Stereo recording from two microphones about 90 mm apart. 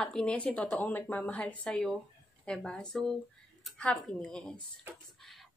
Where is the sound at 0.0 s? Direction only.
10° left (ahead or behind).